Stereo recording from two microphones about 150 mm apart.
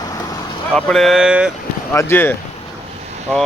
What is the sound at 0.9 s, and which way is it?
Speech, centre (ahead or behind).